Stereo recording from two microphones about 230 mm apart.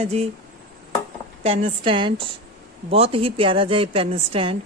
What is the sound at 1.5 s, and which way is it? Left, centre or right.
Speech, right.